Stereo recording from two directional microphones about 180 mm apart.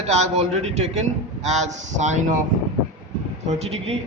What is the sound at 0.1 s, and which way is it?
A man's voice, 40° right (ahead or behind).